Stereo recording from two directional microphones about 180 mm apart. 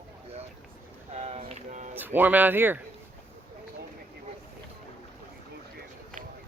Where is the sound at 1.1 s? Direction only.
35° right (ahead or behind).